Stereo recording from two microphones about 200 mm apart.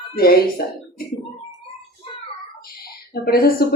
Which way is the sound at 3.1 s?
50° left (ahead or behind).